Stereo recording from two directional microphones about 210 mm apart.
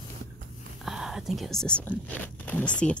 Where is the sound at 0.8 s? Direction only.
Centre (ahead or behind).